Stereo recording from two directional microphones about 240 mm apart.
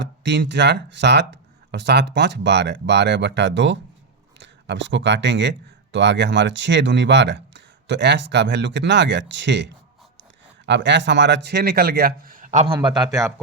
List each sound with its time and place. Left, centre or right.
0.0 s a man's voice: right
12.8 s a man's voice: centre